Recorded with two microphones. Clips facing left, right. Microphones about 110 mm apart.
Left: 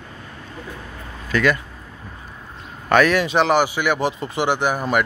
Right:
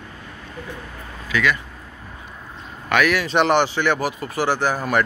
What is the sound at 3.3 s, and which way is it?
Speech, 5° left (ahead or behind).